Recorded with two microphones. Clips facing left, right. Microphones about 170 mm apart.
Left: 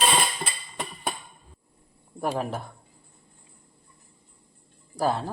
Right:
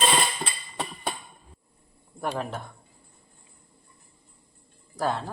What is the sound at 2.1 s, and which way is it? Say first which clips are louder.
Speech: left 2 dB; 10° left (ahead or behind).